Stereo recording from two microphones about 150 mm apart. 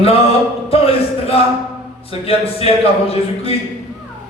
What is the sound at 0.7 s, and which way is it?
A man's voice, 40° left (ahead or behind).